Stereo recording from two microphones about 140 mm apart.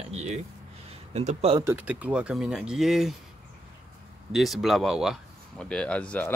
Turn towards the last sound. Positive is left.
turn(degrees=10)  # may be behind; listen again after turning